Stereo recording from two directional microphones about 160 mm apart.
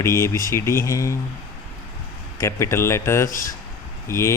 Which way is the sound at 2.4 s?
15° left (ahead or behind).